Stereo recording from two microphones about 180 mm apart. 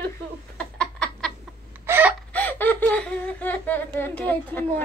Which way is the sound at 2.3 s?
10° left (ahead or behind).